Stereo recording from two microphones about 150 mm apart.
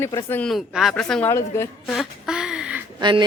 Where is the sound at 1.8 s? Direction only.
5° right (ahead or behind).